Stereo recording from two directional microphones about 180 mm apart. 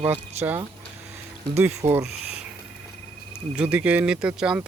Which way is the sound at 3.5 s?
5° right (ahead or behind).